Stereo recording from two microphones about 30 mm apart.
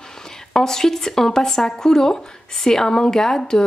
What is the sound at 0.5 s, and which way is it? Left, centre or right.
Speech, centre.